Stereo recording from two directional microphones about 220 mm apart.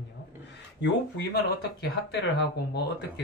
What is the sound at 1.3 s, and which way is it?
Speech, 50° left (ahead or behind).